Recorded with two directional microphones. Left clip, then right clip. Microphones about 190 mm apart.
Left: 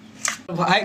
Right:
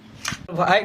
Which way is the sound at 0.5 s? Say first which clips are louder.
Right 2 dB; 30° right (ahead or behind).